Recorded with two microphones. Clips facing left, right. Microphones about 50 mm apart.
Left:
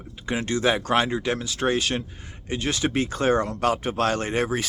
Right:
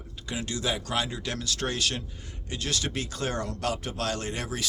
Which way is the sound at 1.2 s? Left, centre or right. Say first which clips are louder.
Left 7 dB; left.